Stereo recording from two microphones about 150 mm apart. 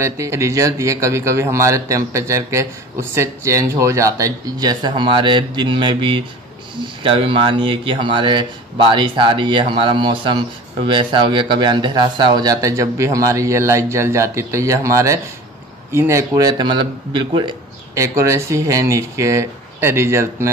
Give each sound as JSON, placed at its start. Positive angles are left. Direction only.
{"t": 0.0, "sound": "a man's voice", "side_deg": -20}
{"t": 17.9, "sound": "a man's voice", "side_deg": -20}